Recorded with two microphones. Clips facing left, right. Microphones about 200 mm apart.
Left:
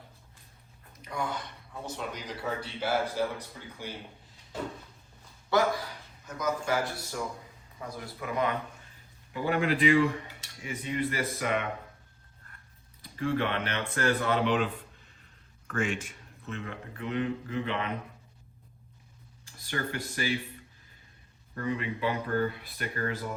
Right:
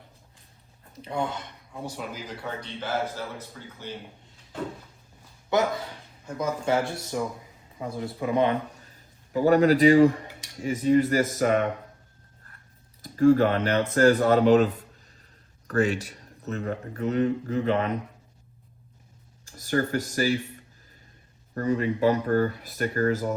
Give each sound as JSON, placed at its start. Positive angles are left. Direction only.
{"t": 1.0, "sound": "a man's voice", "side_deg": -30}
{"t": 1.8, "sound": "a man's voice", "side_deg": -5}
{"t": 5.5, "sound": "a man's voice", "side_deg": -20}
{"t": 8.8, "sound": "a sound", "side_deg": -40}
{"t": 10.6, "sound": "speech", "side_deg": -40}
{"t": 13.0, "sound": "speech", "side_deg": -45}
{"t": 19.5, "sound": "speech", "side_deg": -45}
{"t": 21.5, "sound": "speech", "side_deg": -45}